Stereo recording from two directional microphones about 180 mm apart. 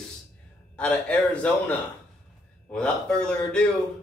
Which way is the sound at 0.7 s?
5° left (ahead or behind).